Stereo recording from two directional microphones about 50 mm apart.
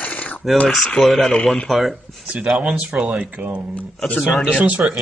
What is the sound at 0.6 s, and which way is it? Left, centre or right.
Speech, centre.